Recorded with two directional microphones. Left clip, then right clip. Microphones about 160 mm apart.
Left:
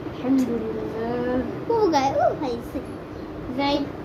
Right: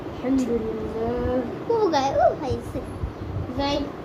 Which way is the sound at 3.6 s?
15° left (ahead or behind).